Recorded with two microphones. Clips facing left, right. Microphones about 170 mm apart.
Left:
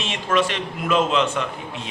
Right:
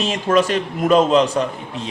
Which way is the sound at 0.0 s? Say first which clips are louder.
Right 5 dB; 40° right (ahead or behind).